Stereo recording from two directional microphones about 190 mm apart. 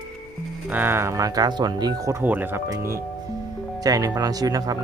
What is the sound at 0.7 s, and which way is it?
Speech, 10° right (ahead or behind).